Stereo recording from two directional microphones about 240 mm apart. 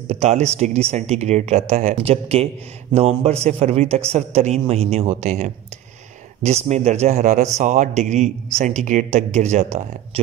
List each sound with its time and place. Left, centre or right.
0.1 s a man's voice: right